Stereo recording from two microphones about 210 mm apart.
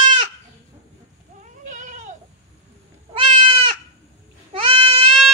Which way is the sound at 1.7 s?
35° right (ahead or behind).